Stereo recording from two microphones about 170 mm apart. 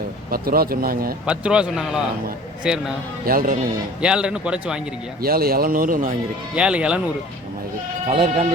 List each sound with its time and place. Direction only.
0.3 s speech: 60° right (ahead or behind)
1.3 s speech: 5° right (ahead or behind)
3.2 s speech: 55° right (ahead or behind)
4.0 s speech: 5° right (ahead or behind)
5.2 s speech: 60° right (ahead or behind)
6.6 s speech: 5° right (ahead or behind)
8.0 s speech: 35° right (ahead or behind)